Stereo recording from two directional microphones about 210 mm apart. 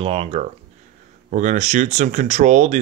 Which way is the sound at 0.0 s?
25° right (ahead or behind).